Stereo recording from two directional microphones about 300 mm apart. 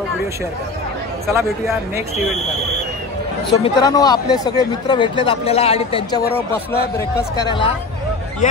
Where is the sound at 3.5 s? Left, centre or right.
Centre.